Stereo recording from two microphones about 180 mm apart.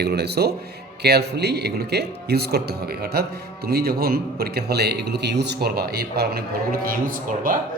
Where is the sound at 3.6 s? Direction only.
60° right (ahead or behind).